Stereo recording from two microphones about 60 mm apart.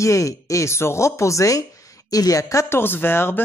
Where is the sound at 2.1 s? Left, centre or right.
Left.